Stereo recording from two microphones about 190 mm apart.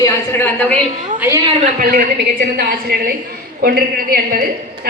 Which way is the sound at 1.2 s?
15° right (ahead or behind).